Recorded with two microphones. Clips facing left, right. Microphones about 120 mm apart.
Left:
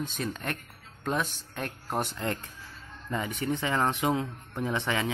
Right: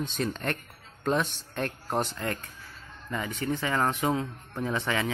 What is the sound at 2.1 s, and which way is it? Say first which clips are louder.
A man's voice: left 1 dB; 20° left (ahead or behind).